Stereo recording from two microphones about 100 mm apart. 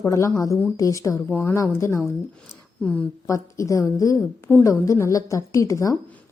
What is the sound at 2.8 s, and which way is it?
Speech, 10° left (ahead or behind).